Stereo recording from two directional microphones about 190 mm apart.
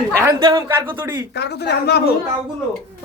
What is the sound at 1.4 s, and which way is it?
Speech, 60° left (ahead or behind).